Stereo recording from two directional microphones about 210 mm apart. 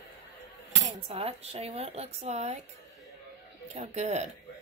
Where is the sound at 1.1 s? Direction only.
30° right (ahead or behind).